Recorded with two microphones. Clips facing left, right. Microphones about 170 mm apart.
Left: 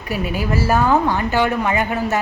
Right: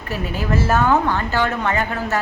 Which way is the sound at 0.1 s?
10° left (ahead or behind).